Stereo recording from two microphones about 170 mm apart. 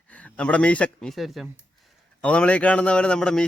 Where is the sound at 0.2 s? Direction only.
5° left (ahead or behind).